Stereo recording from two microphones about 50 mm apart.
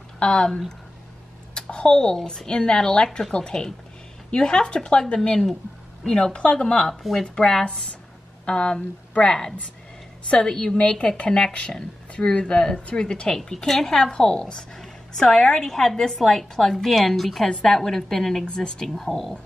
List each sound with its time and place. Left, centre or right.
0.2 s a woman's voice: centre
6.9 s speech: centre
7.2 s a woman's voice: centre
17.5 s a woman's voice: centre
18.9 s speech: centre